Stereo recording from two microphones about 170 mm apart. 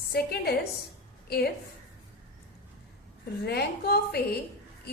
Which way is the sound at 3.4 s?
70° left (ahead or behind).